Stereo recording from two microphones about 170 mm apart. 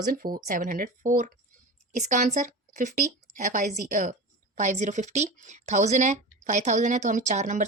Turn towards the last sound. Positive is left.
turn(degrees=-45)  # may be behind; listen again after turning